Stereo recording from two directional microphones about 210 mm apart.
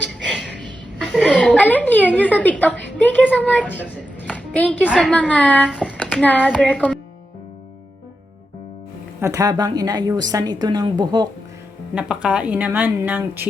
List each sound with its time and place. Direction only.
0.2 s music: 5° left (ahead or behind)
0.9 s chuckle: 5° left (ahead or behind)
2.1 s a woman's voice: 5° left (ahead or behind)
4.3 s a sound: 5° left (ahead or behind)
4.9 s a woman's voice: 5° left (ahead or behind)
6.4 s child singing: centre (ahead or behind)
9.2 s a woman's voice: 15° right (ahead or behind)
11.9 s a woman's voice: 5° right (ahead or behind)